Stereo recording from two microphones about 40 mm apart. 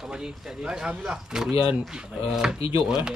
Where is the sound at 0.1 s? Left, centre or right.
Centre.